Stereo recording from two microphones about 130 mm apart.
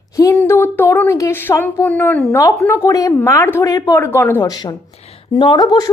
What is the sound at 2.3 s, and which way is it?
A woman's voice, 20° left (ahead or behind).